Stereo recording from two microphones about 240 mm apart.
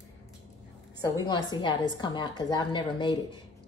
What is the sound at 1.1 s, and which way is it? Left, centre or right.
A woman's voice, centre.